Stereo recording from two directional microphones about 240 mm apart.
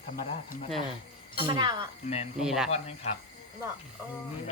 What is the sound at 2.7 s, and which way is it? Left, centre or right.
Speech, left.